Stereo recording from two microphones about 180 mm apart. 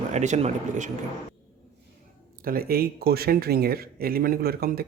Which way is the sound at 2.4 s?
55° right (ahead or behind).